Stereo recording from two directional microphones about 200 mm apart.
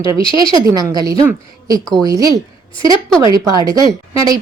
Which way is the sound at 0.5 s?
15° right (ahead or behind).